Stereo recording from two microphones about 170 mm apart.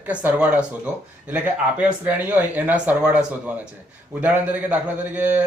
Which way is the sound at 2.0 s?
10° right (ahead or behind).